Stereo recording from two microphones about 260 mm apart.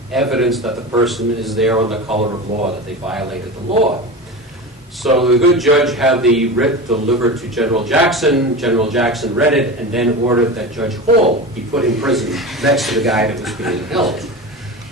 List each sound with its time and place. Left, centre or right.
0.1 s a man's voice: centre
2.0 s speech: right
3.7 s speech: right
5.0 s a man's voice: centre